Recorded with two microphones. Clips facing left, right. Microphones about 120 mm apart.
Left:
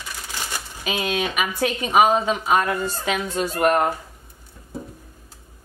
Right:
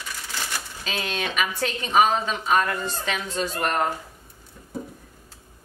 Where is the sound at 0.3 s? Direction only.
15° left (ahead or behind).